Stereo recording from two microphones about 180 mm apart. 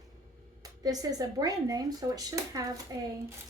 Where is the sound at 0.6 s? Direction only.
20° right (ahead or behind).